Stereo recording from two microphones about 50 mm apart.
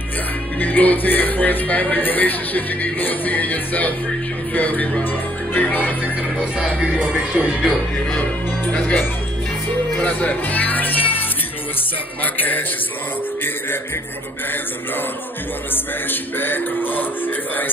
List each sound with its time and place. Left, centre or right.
0.6 s speech: left
6.6 s music: centre
9.9 s music: left
12.2 s speech: left
15.7 s speech: left